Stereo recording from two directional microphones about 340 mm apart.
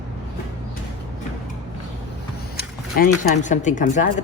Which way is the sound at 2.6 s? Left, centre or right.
Left.